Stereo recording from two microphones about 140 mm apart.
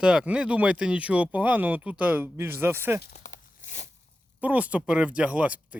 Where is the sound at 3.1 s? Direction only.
65° left (ahead or behind).